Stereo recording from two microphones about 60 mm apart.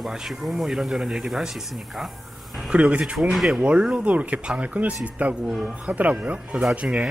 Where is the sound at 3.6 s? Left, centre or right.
Centre.